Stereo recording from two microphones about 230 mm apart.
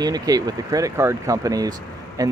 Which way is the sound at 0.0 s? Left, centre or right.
Centre.